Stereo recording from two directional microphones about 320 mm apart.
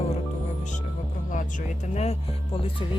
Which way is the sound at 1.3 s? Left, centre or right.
Left.